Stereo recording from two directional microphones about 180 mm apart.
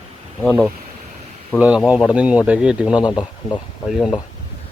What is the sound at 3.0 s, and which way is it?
Speech, 25° left (ahead or behind).